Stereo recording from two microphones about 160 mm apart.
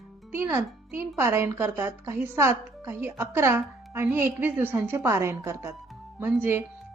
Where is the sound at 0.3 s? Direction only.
15° right (ahead or behind).